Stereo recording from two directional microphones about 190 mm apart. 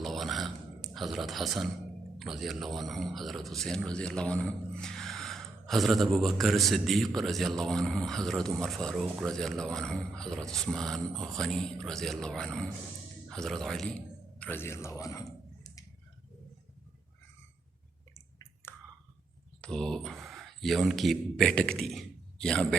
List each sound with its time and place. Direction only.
0.0 s a sound: centre (ahead or behind)
2.1 s a man's voice: centre (ahead or behind); by 15.8 s 15° left (ahead or behind)
19.6 s speech: 5° left (ahead or behind)